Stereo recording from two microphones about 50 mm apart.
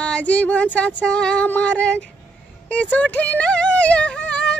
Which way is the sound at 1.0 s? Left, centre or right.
Centre.